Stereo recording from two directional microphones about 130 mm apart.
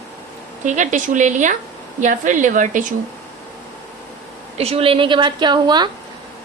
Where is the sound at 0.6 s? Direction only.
70° right (ahead or behind).